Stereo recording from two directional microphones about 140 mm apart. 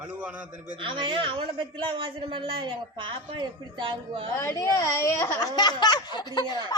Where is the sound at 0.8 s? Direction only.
35° right (ahead or behind).